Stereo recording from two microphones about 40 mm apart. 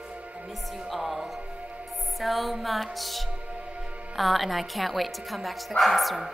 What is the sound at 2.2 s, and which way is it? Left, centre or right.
Music, centre.